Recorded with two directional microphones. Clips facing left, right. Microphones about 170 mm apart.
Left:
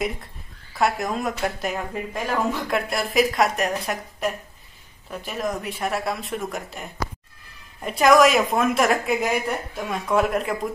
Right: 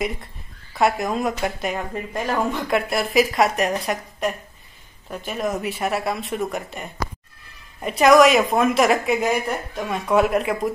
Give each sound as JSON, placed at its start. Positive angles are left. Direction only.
{"t": 0.7, "sound": "a woman's voice", "side_deg": 0}